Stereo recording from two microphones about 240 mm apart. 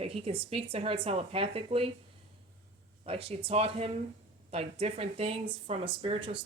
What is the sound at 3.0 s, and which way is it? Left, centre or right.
Speech, right.